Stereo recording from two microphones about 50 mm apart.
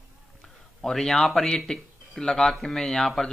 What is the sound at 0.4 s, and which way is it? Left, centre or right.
Speech, centre.